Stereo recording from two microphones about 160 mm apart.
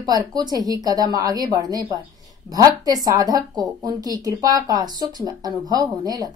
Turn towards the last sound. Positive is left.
turn(degrees=-25)  # may be behind; listen again after turning